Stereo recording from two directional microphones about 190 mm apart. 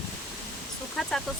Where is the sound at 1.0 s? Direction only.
Centre (ahead or behind).